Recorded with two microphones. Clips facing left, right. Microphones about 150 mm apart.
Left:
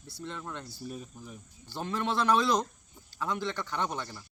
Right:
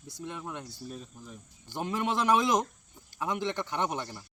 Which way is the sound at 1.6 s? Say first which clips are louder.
Right 1 dB; 15° right (ahead or behind).